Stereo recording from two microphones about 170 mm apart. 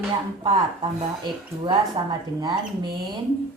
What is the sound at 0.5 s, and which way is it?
A woman's voice, 25° right (ahead or behind).